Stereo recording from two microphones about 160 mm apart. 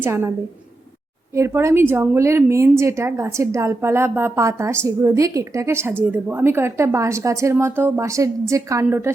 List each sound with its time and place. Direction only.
0.0 s a woman's voice: 15° right (ahead or behind)
1.4 s a woman's voice: 15° right (ahead or behind)